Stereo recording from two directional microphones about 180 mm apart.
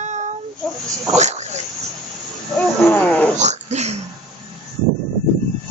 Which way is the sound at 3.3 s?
40° right (ahead or behind).